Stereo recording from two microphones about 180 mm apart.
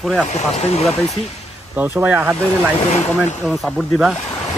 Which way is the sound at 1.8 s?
10° right (ahead or behind).